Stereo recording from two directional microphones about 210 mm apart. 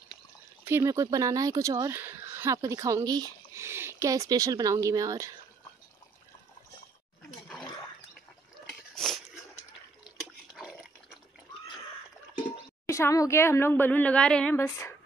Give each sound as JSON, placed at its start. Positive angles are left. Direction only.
{"t": 0.7, "sound": "speech", "side_deg": -15}
{"t": 8.6, "sound": "a sound", "side_deg": 0}
{"t": 10.5, "sound": "dog", "side_deg": -5}
{"t": 12.8, "sound": "speech", "side_deg": 15}